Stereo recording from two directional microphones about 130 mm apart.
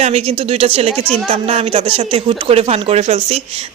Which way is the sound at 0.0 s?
50° right (ahead or behind).